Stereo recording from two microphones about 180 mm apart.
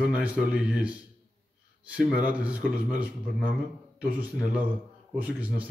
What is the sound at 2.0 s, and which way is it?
Speech, 10° right (ahead or behind).